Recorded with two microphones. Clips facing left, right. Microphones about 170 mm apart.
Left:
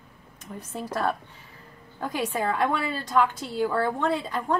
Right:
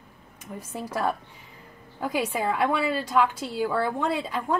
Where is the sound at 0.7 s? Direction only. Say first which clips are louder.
Even; 10° right (ahead or behind).